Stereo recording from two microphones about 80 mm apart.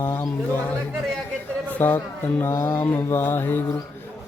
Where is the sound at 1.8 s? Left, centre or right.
Left.